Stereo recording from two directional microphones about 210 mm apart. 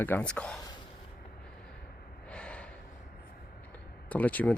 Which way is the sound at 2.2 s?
5° left (ahead or behind).